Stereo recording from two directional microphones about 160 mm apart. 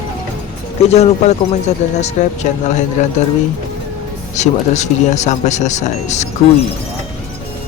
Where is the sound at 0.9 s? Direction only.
40° left (ahead or behind).